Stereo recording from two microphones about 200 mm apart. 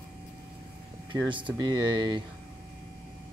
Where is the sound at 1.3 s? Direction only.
25° right (ahead or behind).